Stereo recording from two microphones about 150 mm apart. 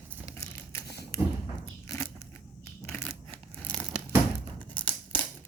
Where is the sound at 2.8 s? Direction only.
10° left (ahead or behind).